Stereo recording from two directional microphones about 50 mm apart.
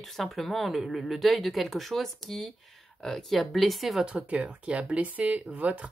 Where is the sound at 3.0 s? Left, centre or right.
Centre.